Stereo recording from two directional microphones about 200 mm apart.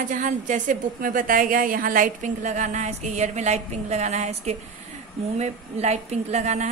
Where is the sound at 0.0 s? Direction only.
40° right (ahead or behind).